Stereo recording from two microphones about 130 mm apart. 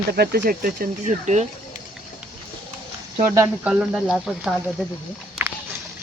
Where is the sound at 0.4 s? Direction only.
80° right.